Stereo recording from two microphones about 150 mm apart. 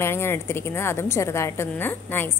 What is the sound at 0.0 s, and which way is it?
A woman's voice, 15° left (ahead or behind).